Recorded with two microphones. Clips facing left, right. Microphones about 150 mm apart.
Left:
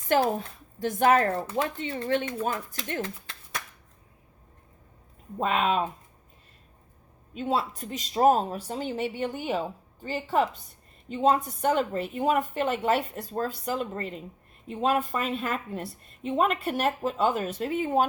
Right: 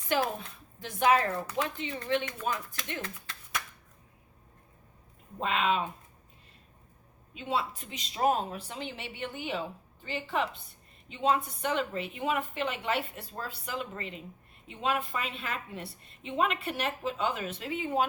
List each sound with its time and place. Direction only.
0.1 s a woman's voice: 45° left (ahead or behind)
3.0 s a sound: 30° left (ahead or behind)
5.4 s a woman's voice: 50° left (ahead or behind)
7.3 s a woman's voice: 45° left (ahead or behind)